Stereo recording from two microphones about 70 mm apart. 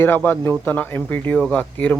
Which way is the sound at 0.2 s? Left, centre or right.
Left.